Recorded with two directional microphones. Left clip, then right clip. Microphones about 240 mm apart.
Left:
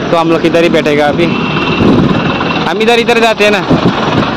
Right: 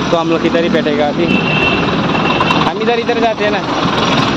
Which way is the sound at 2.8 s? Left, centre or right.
Left.